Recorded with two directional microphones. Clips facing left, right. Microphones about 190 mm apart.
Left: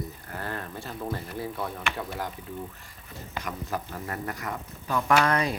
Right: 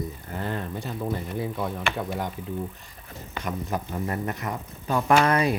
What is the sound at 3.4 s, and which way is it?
Speech, 25° right (ahead or behind).